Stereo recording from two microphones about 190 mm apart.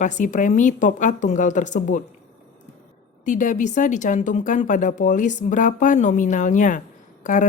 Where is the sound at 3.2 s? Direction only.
40° left (ahead or behind).